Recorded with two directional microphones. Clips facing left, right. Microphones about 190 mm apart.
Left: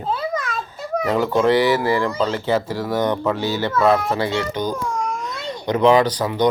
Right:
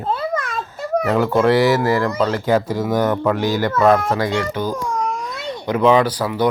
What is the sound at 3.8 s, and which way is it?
Speech, 10° left (ahead or behind).